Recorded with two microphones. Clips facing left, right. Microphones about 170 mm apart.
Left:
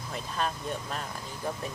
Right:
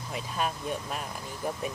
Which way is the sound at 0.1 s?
10° right (ahead or behind).